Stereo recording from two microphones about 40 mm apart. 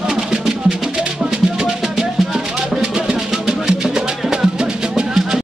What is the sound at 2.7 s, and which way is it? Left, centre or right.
Music, centre.